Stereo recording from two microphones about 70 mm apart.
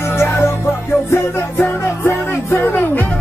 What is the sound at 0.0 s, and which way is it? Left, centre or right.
Music, left.